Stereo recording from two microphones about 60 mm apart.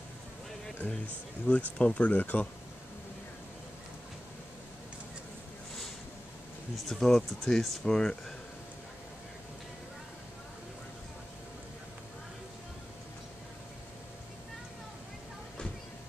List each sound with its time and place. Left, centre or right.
1.5 s speech: left
1.8 s speech: centre
6.9 s speech: centre